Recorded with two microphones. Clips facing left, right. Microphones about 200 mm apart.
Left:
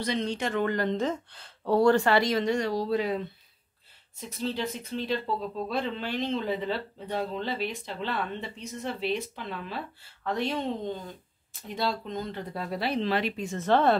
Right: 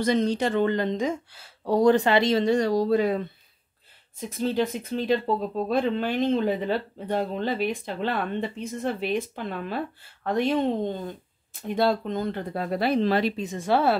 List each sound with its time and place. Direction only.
0.0 s speech: 45° right (ahead or behind)
4.4 s speech: 50° right (ahead or behind)
13.4 s speech: 15° right (ahead or behind)